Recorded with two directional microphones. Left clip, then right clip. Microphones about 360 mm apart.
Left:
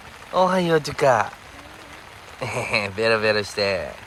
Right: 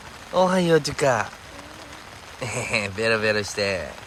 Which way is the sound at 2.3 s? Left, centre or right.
Centre.